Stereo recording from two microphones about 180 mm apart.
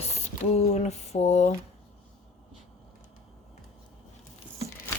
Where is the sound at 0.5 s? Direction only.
40° left (ahead or behind).